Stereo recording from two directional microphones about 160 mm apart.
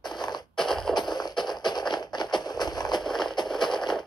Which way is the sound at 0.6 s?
Centre (ahead or behind).